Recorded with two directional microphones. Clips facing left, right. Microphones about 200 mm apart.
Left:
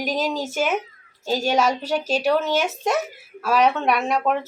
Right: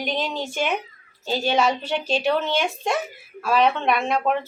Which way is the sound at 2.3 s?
5° left (ahead or behind).